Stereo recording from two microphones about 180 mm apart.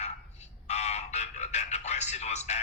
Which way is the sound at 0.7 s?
40° left (ahead or behind).